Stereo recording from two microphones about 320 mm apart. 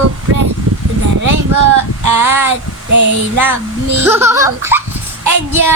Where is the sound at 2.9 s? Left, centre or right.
Right.